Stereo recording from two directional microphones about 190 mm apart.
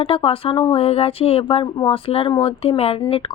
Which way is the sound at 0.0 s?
30° left (ahead or behind).